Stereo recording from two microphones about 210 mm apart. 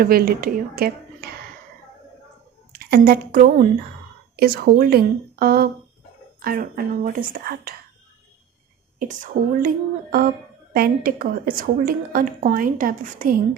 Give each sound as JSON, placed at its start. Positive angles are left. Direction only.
{"t": 0.0, "sound": "speech", "side_deg": -45}
{"t": 2.7, "sound": "speech", "side_deg": -45}
{"t": 9.0, "sound": "a woman's voice", "side_deg": -40}